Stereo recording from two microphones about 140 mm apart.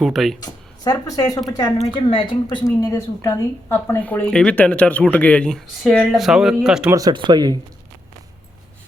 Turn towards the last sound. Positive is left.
turn(degrees=-30)  # may be behind; listen again after turning